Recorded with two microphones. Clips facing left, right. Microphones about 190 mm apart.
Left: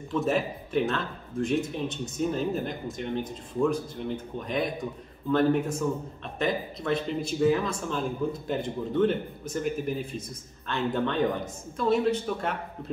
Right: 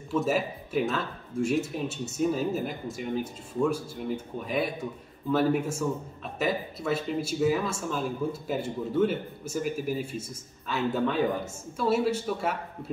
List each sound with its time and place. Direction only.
0.1 s speech: 5° right (ahead or behind)